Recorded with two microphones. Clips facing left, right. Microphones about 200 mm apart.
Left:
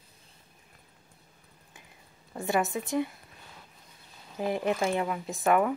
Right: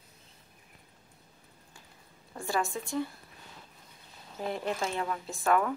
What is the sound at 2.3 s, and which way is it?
Speech, 20° left (ahead or behind).